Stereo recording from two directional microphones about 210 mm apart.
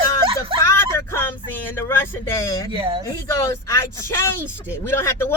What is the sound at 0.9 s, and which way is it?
Speech, 10° left (ahead or behind).